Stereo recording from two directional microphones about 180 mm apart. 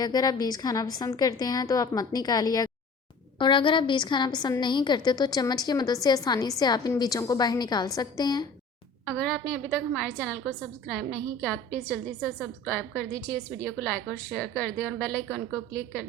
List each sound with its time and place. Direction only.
0.0 s a woman's voice: 20° left (ahead or behind)
9.0 s a woman's voice: centre (ahead or behind)